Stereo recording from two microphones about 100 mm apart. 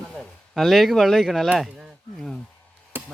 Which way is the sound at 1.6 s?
Centre (ahead or behind).